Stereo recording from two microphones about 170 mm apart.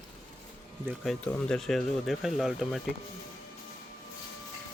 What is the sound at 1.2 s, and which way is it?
Speech, 5° left (ahead or behind).